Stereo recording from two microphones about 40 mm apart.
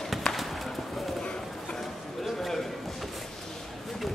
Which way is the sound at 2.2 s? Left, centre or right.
Centre.